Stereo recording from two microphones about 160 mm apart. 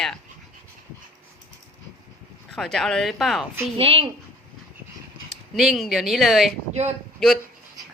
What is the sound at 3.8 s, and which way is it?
Speech, 35° right (ahead or behind).